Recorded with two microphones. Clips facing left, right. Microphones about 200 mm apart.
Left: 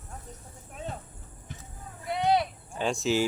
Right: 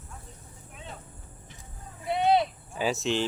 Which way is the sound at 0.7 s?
45° left (ahead or behind).